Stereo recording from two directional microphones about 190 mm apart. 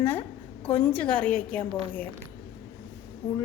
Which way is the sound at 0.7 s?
5° left (ahead or behind).